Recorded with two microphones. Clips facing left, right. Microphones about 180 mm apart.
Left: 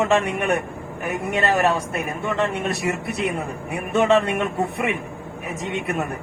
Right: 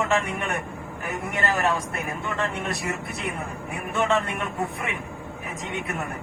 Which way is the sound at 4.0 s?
20° left (ahead or behind).